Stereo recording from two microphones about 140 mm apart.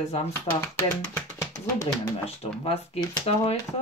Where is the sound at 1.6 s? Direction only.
20° left (ahead or behind).